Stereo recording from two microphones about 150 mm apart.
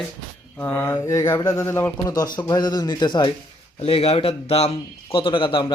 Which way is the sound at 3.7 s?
40° left (ahead or behind).